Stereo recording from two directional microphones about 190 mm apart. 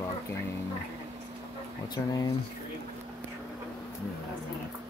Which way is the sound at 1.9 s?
20° left (ahead or behind).